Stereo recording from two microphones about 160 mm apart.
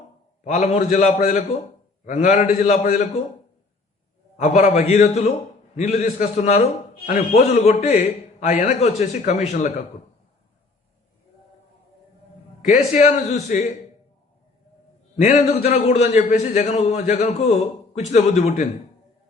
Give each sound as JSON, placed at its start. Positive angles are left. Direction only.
{"t": 0.4, "sound": "a man's voice", "side_deg": 45}
{"t": 4.4, "sound": "a man's voice", "side_deg": 45}
{"t": 12.6, "sound": "a man's voice", "side_deg": 45}
{"t": 15.1, "sound": "a man's voice", "side_deg": 45}